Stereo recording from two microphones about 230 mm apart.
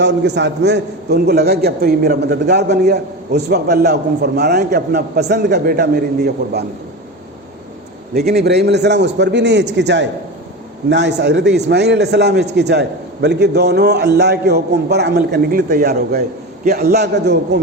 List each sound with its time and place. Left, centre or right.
0.0 s a man's voice: right
8.1 s a man's voice: right